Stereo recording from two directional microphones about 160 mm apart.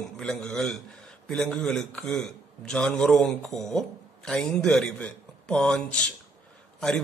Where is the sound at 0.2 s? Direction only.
5° left (ahead or behind).